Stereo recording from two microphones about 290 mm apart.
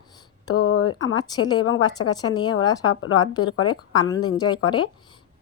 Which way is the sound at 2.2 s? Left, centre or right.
Centre.